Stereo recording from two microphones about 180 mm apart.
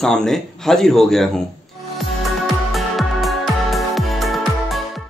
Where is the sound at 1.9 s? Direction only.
Centre (ahead or behind).